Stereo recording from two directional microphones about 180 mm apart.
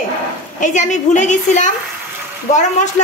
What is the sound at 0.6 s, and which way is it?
A woman's voice, 40° left (ahead or behind).